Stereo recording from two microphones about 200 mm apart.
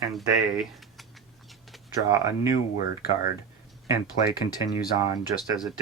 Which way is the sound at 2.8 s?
45° left (ahead or behind).